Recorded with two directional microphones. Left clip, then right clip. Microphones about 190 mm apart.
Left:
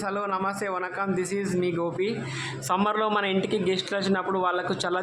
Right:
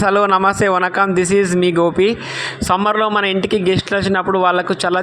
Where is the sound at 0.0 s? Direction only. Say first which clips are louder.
Right 15 dB; 40° right (ahead or behind).